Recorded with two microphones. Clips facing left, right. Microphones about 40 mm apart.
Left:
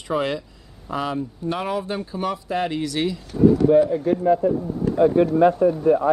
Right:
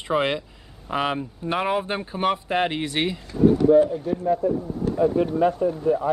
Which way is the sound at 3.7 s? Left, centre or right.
Left.